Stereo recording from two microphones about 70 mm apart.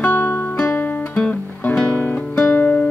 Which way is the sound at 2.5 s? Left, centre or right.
Left.